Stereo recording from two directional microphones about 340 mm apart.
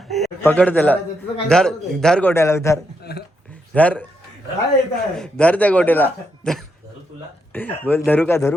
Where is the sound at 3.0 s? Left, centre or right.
Left.